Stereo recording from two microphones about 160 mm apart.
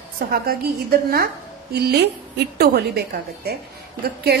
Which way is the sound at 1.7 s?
90° right.